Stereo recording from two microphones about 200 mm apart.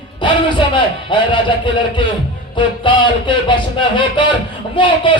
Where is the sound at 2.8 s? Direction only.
25° left (ahead or behind).